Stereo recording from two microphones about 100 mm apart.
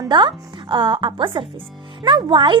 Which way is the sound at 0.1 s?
50° right (ahead or behind).